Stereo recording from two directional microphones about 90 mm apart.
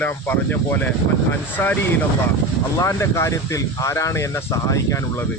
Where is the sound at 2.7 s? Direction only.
35° left (ahead or behind).